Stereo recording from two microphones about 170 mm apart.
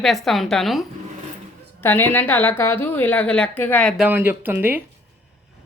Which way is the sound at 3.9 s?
10° right (ahead or behind).